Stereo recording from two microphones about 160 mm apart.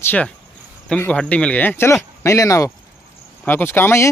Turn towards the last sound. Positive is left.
turn(degrees=15)  # may be behind; listen again after turning